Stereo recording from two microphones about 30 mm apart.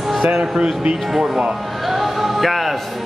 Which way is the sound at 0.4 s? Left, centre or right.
Right.